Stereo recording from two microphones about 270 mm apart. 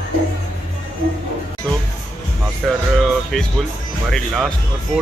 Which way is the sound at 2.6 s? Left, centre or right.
Centre.